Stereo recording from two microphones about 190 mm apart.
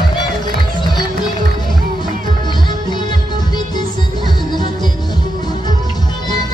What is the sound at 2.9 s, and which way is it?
Music, 25° left (ahead or behind).